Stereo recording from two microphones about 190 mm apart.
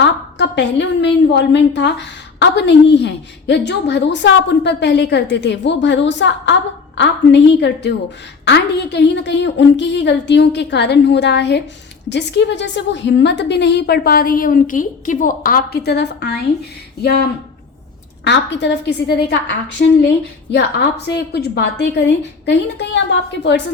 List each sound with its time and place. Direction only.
0.0 s a woman's voice: 65° left (ahead or behind)
18.3 s a woman's voice: 65° left (ahead or behind)